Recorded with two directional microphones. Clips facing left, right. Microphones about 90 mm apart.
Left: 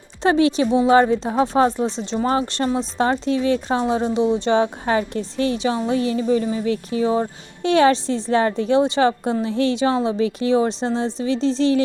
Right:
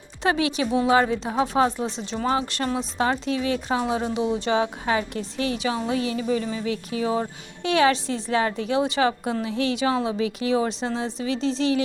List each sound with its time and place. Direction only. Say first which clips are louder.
0.2 s speech: left 6 dB; 35° left (ahead or behind)